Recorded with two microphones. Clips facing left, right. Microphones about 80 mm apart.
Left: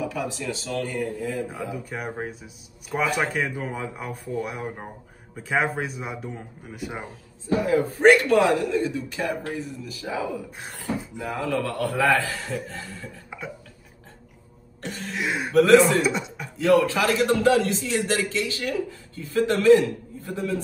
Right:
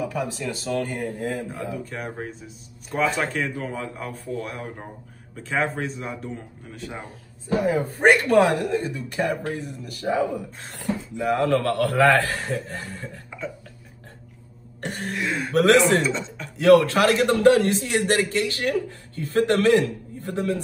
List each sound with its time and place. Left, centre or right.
0.0 s speech: right
1.5 s speech: centre
7.5 s speech: right
11.2 s a man's voice: right
14.8 s throat clearing: right
15.1 s speech: centre
15.5 s speech: right
16.0 s speech: centre
16.5 s a man's voice: right